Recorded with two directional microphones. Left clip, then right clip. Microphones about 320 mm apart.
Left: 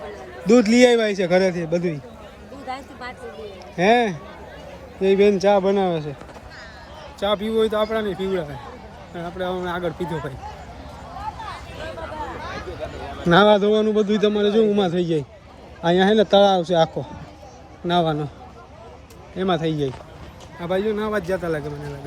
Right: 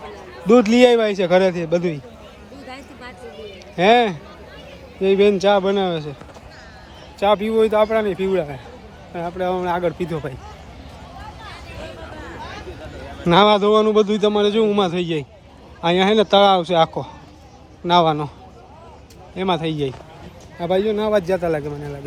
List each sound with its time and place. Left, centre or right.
0.0 s a man's voice: centre
2.6 s a sound: centre
3.8 s a man's voice: centre
8.0 s a man's voice: centre
9.4 s speech: right
10.0 s a man's voice: centre
11.2 s a sound: centre
15.8 s a man's voice: centre
19.4 s a man's voice: centre